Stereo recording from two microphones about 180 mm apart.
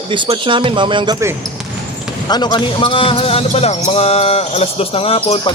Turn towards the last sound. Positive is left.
turn(degrees=30)  # may be behind; listen again after turning